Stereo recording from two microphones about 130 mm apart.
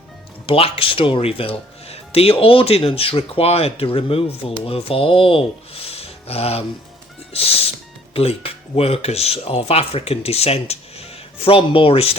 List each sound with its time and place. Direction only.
0.4 s speech: 45° left (ahead or behind)